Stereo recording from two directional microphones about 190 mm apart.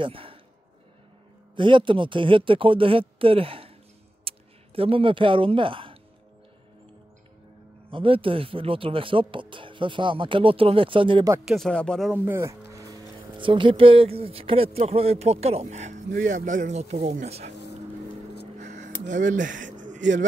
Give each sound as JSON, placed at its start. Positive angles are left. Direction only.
{"t": 0.0, "sound": "speech", "side_deg": -30}
{"t": 1.6, "sound": "speech", "side_deg": -25}
{"t": 7.9, "sound": "speech", "side_deg": -30}
{"t": 11.4, "sound": "speech", "side_deg": 0}
{"t": 12.3, "sound": "speech", "side_deg": -15}
{"t": 18.6, "sound": "a sound", "side_deg": -40}
{"t": 19.0, "sound": "speech", "side_deg": -40}